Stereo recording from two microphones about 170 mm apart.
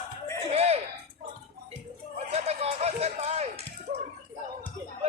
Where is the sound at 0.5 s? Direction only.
40° right (ahead or behind).